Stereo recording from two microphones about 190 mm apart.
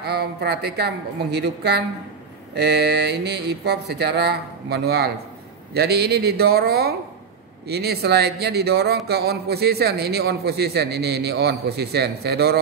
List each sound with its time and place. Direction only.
0.0 s a man's voice: 60° right (ahead or behind)